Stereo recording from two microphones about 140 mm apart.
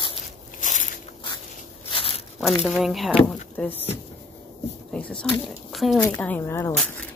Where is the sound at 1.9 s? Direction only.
45° left (ahead or behind).